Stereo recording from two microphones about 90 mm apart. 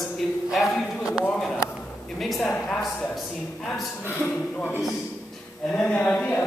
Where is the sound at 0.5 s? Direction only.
5° right (ahead or behind).